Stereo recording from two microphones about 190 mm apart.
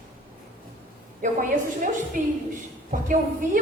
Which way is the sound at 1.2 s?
45° right (ahead or behind).